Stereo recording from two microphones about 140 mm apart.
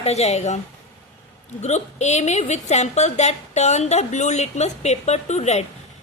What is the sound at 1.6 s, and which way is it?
A woman's voice, 55° left (ahead or behind).